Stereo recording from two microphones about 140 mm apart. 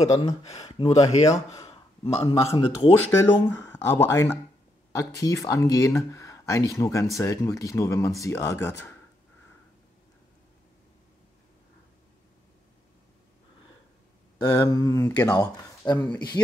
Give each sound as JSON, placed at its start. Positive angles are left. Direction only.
{"t": 0.0, "sound": "speech", "side_deg": 50}
{"t": 3.1, "sound": "speech", "side_deg": 15}
{"t": 14.4, "sound": "a man's voice", "side_deg": 25}